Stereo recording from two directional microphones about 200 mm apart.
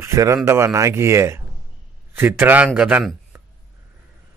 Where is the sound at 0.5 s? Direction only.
15° right (ahead or behind).